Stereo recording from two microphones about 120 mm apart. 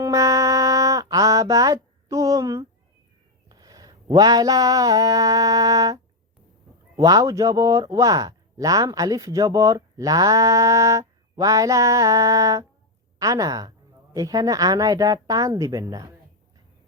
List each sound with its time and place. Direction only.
0.0 s music: 30° right (ahead or behind)
3.5 s a sound: 35° right (ahead or behind)
6.9 s speech: 30° right (ahead or behind)